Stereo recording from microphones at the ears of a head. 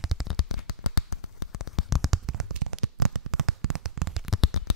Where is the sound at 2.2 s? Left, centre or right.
Right.